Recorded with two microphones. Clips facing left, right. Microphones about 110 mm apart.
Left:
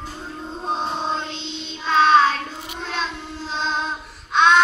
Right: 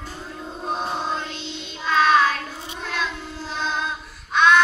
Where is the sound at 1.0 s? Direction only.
25° left (ahead or behind).